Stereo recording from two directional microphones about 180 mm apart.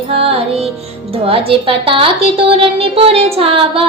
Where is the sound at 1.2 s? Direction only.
30° right (ahead or behind).